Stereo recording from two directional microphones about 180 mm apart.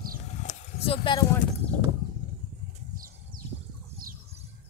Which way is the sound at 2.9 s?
50° right (ahead or behind).